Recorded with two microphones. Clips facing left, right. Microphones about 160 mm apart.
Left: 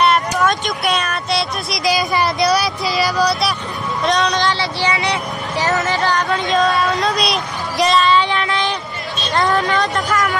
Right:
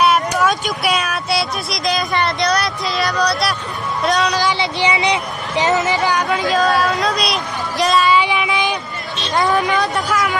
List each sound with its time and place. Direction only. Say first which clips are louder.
0.0 s speech: even; 5° right (ahead or behind)
4.5 s speech: right 1 dB; 15° right (ahead or behind)
6.1 s speech: even; 5° right (ahead or behind)
8.2 s a sound: even; 10° right (ahead or behind)
9.3 s speech: even; 10° right (ahead or behind)